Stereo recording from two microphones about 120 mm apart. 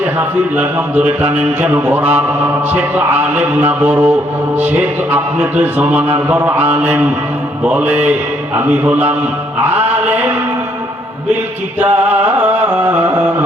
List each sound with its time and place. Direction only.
0.2 s speech: 15° right (ahead or behind)
5.1 s speech: 15° right (ahead or behind)
9.6 s music: 15° right (ahead or behind)
11.8 s speech: 15° right (ahead or behind)